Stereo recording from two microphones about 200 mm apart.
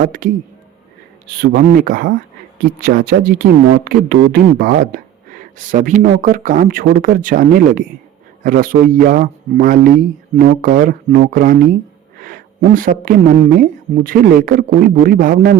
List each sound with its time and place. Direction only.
0.0 s a man's voice: 40° right (ahead or behind)
1.4 s a woman's voice: 45° right (ahead or behind)